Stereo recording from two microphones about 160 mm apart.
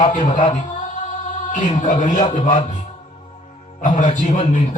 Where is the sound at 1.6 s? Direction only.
45° left (ahead or behind).